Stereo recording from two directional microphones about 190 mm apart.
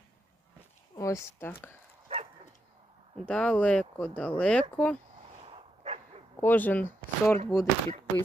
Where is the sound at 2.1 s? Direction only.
35° right (ahead or behind).